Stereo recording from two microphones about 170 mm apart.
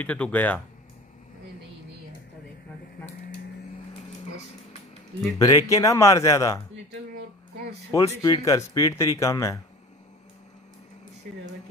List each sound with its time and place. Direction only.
0.0 s speech: 10° left (ahead or behind)
5.4 s speech: 20° left (ahead or behind)
8.2 s speech: 20° left (ahead or behind)